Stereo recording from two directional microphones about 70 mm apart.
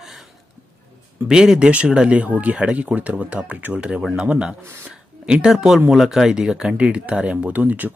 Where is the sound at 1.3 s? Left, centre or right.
Centre.